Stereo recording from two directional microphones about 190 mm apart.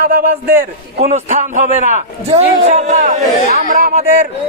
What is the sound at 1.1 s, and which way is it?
Speech, 40° right (ahead or behind).